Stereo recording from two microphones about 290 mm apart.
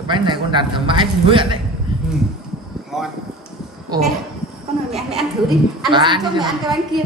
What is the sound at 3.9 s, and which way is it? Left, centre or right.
Speech, centre.